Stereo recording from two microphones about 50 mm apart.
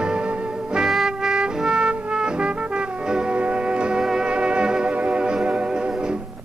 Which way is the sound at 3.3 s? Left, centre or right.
Right.